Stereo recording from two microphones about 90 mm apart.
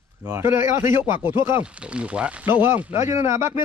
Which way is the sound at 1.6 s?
15° right (ahead or behind).